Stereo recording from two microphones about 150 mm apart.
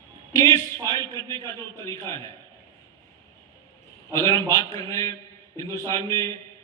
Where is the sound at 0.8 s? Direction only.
25° right (ahead or behind).